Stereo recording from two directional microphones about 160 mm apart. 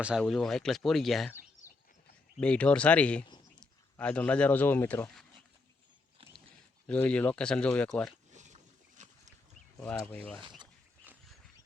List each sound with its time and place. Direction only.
0.0 s speech: centre (ahead or behind)
2.4 s speech: 5° left (ahead or behind)
6.8 s speech: 10° left (ahead or behind)
8.3 s a sound: 50° right (ahead or behind)
9.8 s speech: 10° left (ahead or behind)